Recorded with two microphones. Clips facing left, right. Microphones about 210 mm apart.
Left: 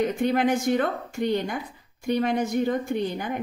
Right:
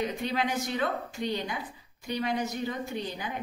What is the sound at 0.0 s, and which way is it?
A woman's voice, 50° left (ahead or behind).